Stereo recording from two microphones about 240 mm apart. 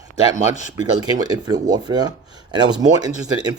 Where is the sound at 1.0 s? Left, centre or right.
Centre.